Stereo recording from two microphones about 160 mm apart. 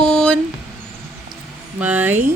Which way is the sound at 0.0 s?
5° left (ahead or behind).